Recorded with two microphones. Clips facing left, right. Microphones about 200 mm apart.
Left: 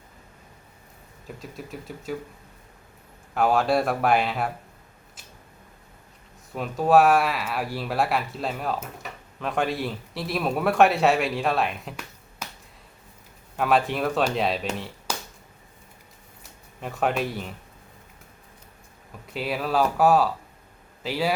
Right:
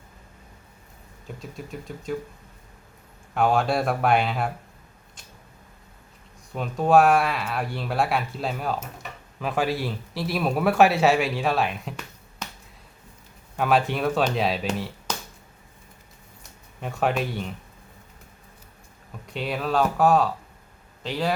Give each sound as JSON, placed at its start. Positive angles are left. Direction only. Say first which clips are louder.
{"t": 1.4, "sound": "speech", "louder": "right 1 dB", "side_deg": 0}
{"t": 3.3, "sound": "speech", "louder": "left 1 dB", "side_deg": 0}
{"t": 6.5, "sound": "speech", "louder": "even", "side_deg": 0}
{"t": 13.6, "sound": "speech", "louder": "even", "side_deg": 0}
{"t": 15.1, "sound": "a sound", "louder": "left 1 dB", "side_deg": 10}
{"t": 16.4, "sound": "a sound", "louder": "right 1 dB", "side_deg": 0}
{"t": 19.3, "sound": "speech", "louder": "even", "side_deg": 5}